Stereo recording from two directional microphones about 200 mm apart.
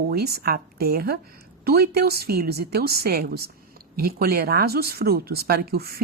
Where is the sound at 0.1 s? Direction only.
50° right (ahead or behind).